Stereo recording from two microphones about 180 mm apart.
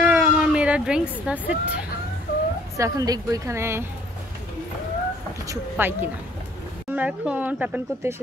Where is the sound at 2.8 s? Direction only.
20° right (ahead or behind).